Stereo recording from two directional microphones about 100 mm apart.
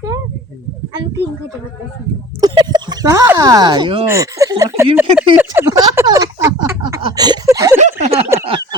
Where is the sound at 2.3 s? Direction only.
45° right (ahead or behind).